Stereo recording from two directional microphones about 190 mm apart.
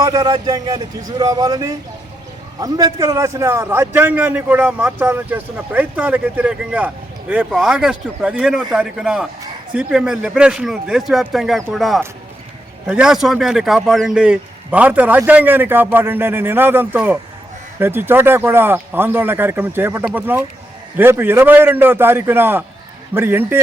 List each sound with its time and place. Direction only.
0.0 s a man's voice: 20° right (ahead or behind)